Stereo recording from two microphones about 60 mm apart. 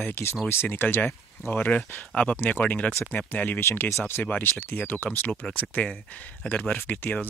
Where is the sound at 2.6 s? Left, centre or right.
Left.